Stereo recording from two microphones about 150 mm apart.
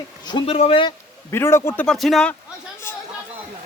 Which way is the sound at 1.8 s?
Centre (ahead or behind).